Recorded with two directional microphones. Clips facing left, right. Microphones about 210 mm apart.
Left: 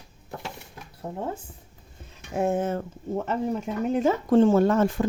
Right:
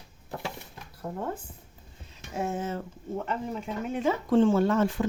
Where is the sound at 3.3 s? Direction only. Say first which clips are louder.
Left 7 dB; 40° left (ahead or behind).